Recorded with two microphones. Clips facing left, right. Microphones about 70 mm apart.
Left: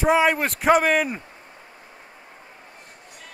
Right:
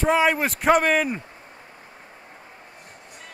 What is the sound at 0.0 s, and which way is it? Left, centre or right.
Speech, centre.